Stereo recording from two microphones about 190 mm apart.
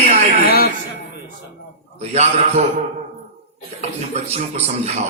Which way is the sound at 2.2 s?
40° right (ahead or behind).